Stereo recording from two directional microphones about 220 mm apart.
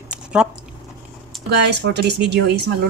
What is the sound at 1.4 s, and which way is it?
Speech, 50° right (ahead or behind).